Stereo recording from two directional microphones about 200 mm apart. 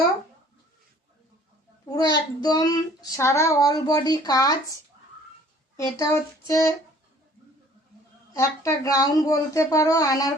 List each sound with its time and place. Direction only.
2.0 s child singing: 20° left (ahead or behind)
5.7 s speech: 15° left (ahead or behind)
8.3 s speech: 15° left (ahead or behind)